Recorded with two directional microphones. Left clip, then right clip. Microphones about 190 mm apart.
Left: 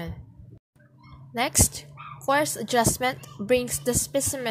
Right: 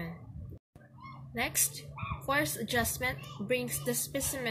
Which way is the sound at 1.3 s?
50° left (ahead or behind).